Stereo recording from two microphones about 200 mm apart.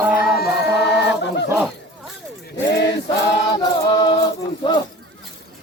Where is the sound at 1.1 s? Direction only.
60° left (ahead or behind).